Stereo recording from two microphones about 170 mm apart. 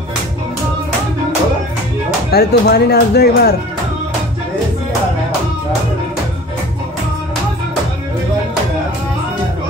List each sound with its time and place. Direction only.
2.3 s speech: 70° left (ahead or behind)